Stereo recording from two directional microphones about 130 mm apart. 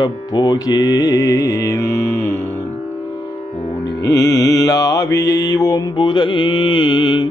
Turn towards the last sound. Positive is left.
turn(degrees=35)  # may be behind; listen again after turning